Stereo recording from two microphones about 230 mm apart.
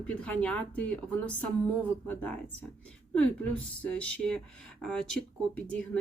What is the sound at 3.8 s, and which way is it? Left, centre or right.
Speech, centre.